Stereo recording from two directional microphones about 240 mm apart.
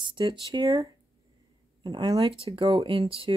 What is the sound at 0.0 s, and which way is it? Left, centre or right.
Speech, centre.